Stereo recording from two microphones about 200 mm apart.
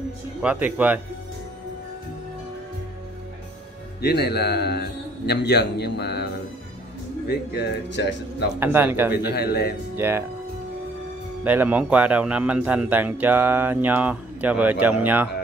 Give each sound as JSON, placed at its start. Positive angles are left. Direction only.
{"t": 0.4, "sound": "a man's voice", "side_deg": -5}
{"t": 4.0, "sound": "a man's voice", "side_deg": 55}
{"t": 7.2, "sound": "a man's voice", "side_deg": 55}
{"t": 8.5, "sound": "a man's voice", "side_deg": -10}
{"t": 9.3, "sound": "a man's voice", "side_deg": 55}
{"t": 9.9, "sound": "speech", "side_deg": -10}
{"t": 11.4, "sound": "a man's voice", "side_deg": -10}